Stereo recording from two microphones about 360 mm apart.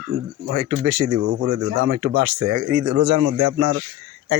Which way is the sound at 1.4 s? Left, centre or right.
Right.